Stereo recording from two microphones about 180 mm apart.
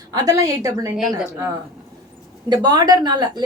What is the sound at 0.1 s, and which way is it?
Speech, 20° right (ahead or behind).